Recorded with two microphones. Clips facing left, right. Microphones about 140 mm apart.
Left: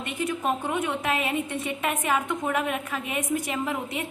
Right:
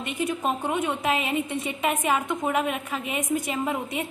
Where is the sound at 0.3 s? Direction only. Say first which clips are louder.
Left 1 dB; 15° right (ahead or behind).